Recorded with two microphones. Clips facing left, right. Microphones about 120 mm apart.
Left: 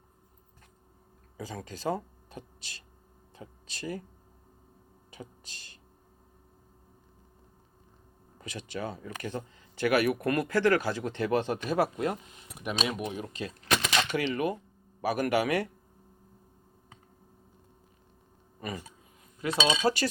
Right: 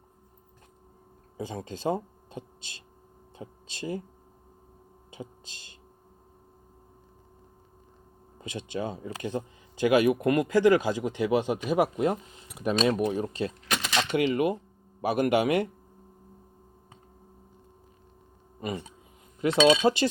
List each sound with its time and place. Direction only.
1.4 s speech: 25° right (ahead or behind)
5.1 s a sound: 20° right (ahead or behind)
8.4 s speech: 20° right (ahead or behind)
12.7 s speech: 5° left (ahead or behind)
13.0 s speech: 35° right (ahead or behind)
18.6 s speech: 20° right (ahead or behind)
19.5 s speech: 5° right (ahead or behind)
19.8 s speech: 20° right (ahead or behind)